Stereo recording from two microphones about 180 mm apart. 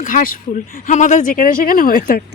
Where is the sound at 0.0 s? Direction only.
45° left (ahead or behind).